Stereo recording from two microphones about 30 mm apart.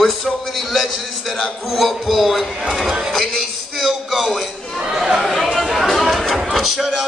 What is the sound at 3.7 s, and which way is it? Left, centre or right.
Music, centre.